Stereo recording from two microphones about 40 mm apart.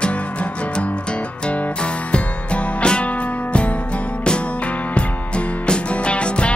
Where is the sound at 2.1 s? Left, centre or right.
Left.